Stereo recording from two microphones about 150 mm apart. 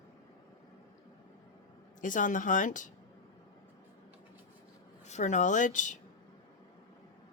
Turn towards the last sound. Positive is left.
turn(degrees=60)  # may be behind; listen again after turning